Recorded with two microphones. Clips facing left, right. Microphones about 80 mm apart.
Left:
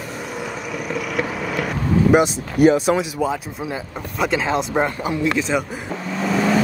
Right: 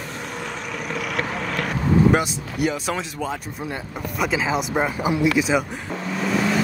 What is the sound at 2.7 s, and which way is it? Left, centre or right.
Speech, centre.